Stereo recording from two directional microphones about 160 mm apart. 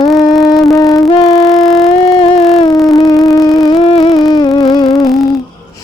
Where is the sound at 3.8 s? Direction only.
35° left (ahead or behind).